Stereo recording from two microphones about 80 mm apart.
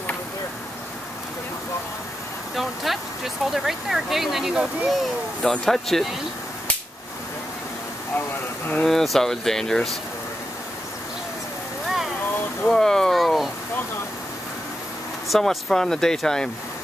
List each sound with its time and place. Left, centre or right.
2.5 s speech: centre
8.8 s speech: centre
12.6 s a sound: centre
15.2 s speech: centre